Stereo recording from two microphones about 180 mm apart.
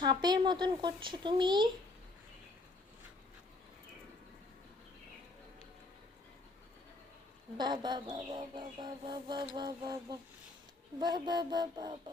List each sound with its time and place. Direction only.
0.0 s bird: 25° right (ahead or behind)
7.5 s bird: 25° right (ahead or behind)